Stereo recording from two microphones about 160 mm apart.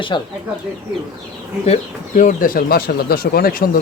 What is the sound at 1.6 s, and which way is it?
Speech, 50° left (ahead or behind).